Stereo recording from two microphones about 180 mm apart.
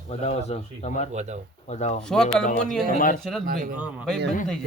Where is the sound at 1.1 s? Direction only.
40° right (ahead or behind).